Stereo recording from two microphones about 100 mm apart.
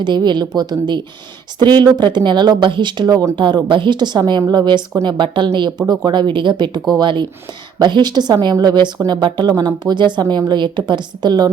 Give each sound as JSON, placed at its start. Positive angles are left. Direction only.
{"t": 0.0, "sound": "a woman's voice", "side_deg": -50}